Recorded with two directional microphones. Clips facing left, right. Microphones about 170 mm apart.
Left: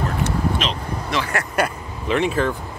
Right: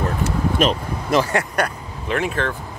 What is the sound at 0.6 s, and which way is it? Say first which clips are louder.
Speech: right 6 dB; 45° right (ahead or behind).